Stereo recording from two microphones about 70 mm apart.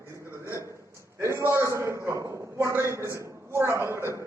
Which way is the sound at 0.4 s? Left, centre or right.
Right.